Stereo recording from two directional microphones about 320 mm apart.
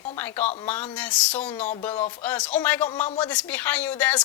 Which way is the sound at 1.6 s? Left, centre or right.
Left.